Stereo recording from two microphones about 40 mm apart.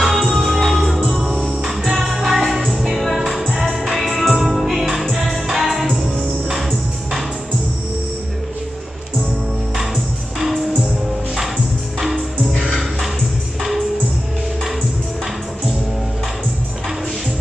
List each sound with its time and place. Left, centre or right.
0.0 s music: centre
13.6 s music: centre